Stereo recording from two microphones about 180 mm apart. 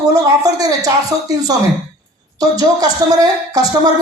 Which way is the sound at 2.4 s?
20° right (ahead or behind).